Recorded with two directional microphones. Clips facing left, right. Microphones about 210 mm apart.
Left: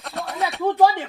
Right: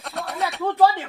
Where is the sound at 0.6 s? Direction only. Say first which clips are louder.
Left 1 dB; 15° left (ahead or behind).